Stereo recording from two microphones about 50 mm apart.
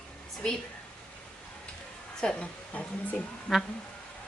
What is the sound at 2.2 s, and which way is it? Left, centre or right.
Speech, centre.